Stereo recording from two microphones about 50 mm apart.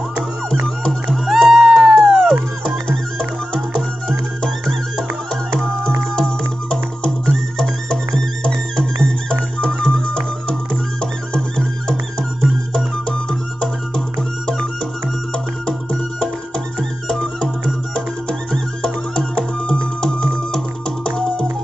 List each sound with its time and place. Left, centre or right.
1.1 s music: centre
1.7 s cat: centre
2.0 s music: centre
9.0 s music: centre
15.3 s music: centre
17.1 s music: centre
18.5 s music: centre